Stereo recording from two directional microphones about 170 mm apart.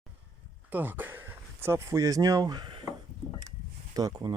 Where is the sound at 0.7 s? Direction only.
10° right (ahead or behind).